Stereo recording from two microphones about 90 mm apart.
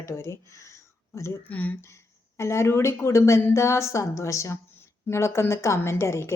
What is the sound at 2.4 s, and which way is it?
A woman's voice, 30° left (ahead or behind).